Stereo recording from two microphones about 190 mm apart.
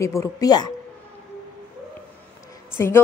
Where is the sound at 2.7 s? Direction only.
10° left (ahead or behind).